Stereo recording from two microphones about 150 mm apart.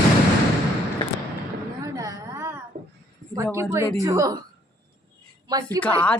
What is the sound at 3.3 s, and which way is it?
Speech, 20° right (ahead or behind).